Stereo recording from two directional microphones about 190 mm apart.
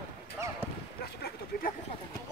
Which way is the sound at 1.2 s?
55° left (ahead or behind).